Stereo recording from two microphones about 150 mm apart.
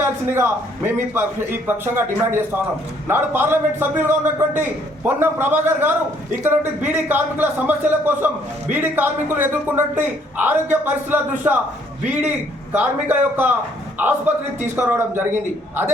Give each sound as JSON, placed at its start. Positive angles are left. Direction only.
{"t": 0.0, "sound": "a sound", "side_deg": -15}
{"t": 0.9, "sound": "a man's voice", "side_deg": -15}
{"t": 12.7, "sound": "a man's voice", "side_deg": -10}